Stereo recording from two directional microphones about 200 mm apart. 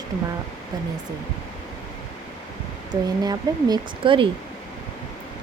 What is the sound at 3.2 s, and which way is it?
Speech, 20° right (ahead or behind).